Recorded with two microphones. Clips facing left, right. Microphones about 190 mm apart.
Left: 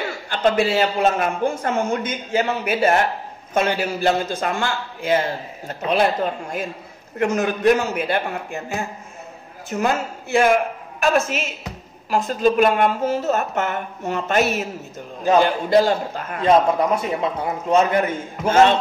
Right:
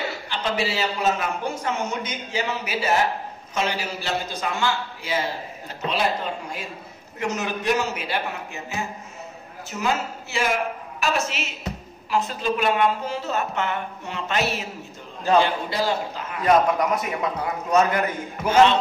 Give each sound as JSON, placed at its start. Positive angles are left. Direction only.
{"t": 0.3, "sound": "a man's voice", "side_deg": 50}
{"t": 7.2, "sound": "a man's voice", "side_deg": 55}
{"t": 16.3, "sound": "a man's voice", "side_deg": 25}
{"t": 18.5, "sound": "a man's voice", "side_deg": 50}